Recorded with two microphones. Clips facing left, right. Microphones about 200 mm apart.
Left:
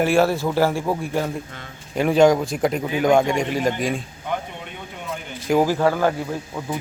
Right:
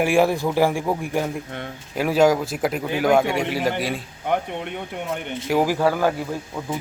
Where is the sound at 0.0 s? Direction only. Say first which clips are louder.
Even; 15° right (ahead or behind).